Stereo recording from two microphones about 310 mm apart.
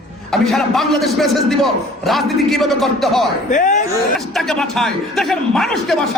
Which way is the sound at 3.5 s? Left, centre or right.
Left.